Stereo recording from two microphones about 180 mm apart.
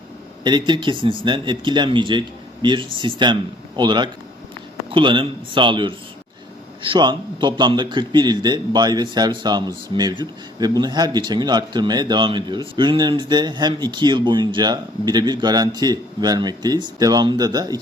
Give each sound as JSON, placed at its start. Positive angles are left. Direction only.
{"t": 0.4, "sound": "a man's voice", "side_deg": -25}